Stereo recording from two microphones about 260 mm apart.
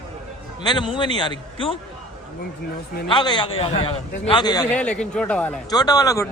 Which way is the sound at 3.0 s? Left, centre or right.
Centre.